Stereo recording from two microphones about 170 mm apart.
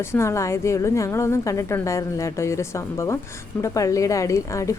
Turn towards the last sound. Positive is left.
turn(degrees=20)  # may be behind; listen again after turning